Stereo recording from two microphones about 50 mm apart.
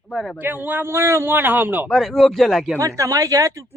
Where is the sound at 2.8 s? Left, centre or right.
Right.